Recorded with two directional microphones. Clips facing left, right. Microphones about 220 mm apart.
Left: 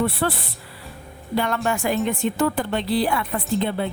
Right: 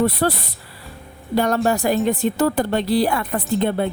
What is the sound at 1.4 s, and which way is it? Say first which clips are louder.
A woman's voice: right 5 dB; 40° right (ahead or behind).